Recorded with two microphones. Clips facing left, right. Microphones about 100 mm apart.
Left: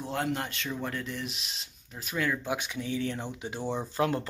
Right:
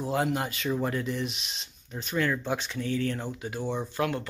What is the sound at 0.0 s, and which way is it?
Speech, 5° right (ahead or behind).